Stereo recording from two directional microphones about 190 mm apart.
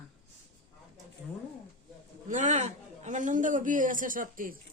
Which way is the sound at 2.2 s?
40° right (ahead or behind).